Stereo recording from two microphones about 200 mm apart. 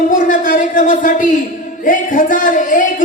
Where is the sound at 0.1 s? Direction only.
40° left (ahead or behind).